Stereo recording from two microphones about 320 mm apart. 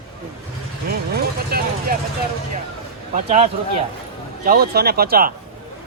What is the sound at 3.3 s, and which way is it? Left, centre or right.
Speech, centre.